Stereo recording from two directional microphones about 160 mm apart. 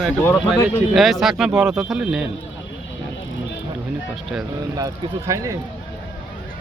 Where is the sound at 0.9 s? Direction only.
Centre (ahead or behind).